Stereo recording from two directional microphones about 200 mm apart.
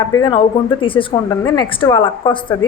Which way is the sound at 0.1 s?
20° left (ahead or behind).